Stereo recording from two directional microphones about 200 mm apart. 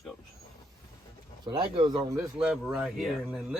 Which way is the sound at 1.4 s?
20° right (ahead or behind).